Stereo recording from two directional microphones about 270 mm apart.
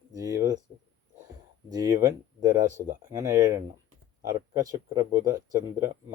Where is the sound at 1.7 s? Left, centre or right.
Centre.